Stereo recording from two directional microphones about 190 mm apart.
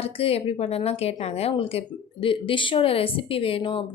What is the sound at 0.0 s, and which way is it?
Speech, 30° left (ahead or behind).